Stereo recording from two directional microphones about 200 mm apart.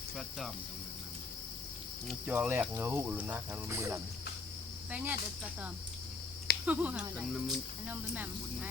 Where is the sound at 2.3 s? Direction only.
10° right (ahead or behind).